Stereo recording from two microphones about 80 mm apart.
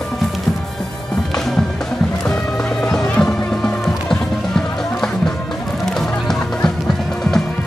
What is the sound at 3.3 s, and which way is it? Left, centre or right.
Music, centre.